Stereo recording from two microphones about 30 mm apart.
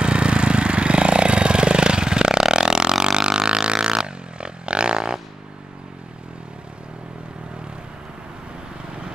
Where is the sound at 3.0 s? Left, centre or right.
Right.